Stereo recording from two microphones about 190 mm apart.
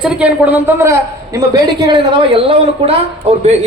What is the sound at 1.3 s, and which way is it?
A man's voice, 20° right (ahead or behind).